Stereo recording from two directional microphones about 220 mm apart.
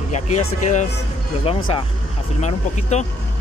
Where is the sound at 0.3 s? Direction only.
75° left (ahead or behind).